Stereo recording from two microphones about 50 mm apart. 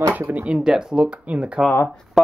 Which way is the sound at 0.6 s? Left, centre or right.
Centre.